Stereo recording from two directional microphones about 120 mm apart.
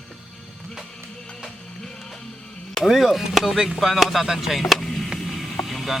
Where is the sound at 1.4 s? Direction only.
Centre (ahead or behind).